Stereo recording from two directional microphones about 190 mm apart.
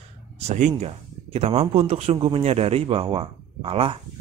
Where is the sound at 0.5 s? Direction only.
35° right (ahead or behind).